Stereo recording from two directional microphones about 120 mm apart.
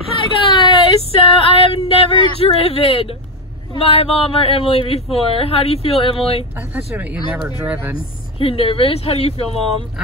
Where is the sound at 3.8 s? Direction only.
55° left (ahead or behind).